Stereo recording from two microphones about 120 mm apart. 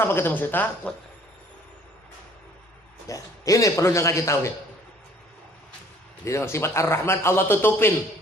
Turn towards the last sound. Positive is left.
turn(degrees=20)  # may be behind; listen again after turning